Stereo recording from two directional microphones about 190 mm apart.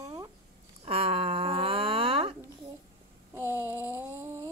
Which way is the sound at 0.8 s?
30° right (ahead or behind).